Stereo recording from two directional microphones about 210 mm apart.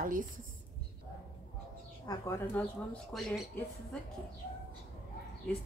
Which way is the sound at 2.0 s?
15° left (ahead or behind).